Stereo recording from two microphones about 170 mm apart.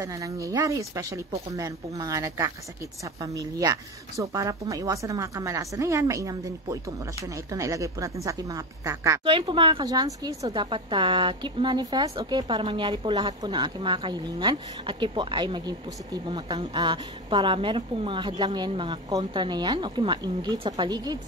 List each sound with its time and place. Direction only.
0.0 s speech: 20° right (ahead or behind)
9.2 s speech: 30° right (ahead or behind)